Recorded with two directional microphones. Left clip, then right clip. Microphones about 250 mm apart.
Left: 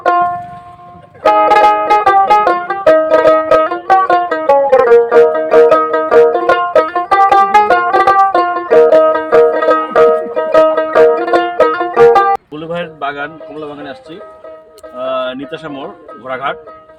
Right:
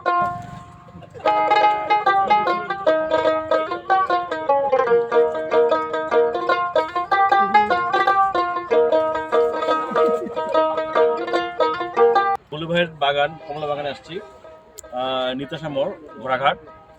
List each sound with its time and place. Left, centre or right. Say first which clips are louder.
0.0 s music: left 9 dB; left
1.3 s music: left 9 dB; left
14.9 s a sound: left 5 dB; centre